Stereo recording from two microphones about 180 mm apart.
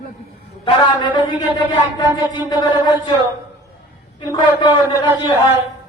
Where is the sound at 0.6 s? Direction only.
25° left (ahead or behind).